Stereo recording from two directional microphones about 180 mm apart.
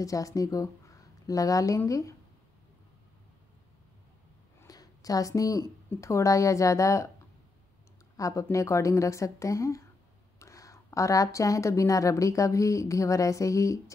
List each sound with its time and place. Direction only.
0.0 s speech: 20° left (ahead or behind)
4.6 s speech: 20° left (ahead or behind)
8.2 s a woman's voice: 15° left (ahead or behind)